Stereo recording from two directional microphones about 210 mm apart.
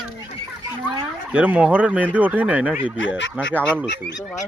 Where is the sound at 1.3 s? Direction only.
5° right (ahead or behind).